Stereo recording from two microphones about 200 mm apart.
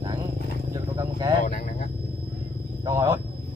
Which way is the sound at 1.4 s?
40° left (ahead or behind).